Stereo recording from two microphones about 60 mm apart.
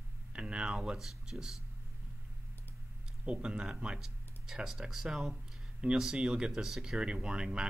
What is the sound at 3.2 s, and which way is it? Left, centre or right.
Speech, centre.